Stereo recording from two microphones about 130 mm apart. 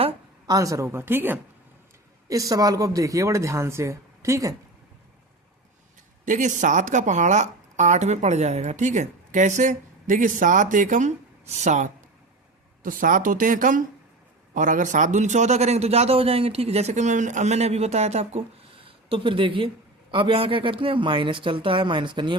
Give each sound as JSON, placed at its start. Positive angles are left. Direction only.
{"t": 0.4, "sound": "a woman's voice", "side_deg": -25}
{"t": 2.2, "sound": "a woman's voice", "side_deg": -25}
{"t": 6.2, "sound": "speech", "side_deg": -75}
{"t": 12.8, "sound": "a man's voice", "side_deg": -90}